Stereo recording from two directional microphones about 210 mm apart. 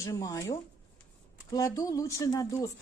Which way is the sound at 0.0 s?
15° left (ahead or behind).